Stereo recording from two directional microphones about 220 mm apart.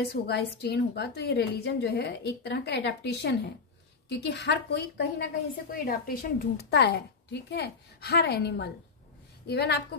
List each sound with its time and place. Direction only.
0.1 s a woman's voice: 50° left (ahead or behind)